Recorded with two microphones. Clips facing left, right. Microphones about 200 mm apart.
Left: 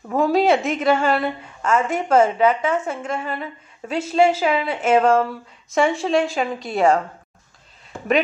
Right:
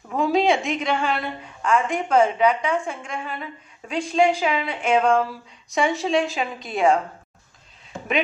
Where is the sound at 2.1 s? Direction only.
45° left (ahead or behind).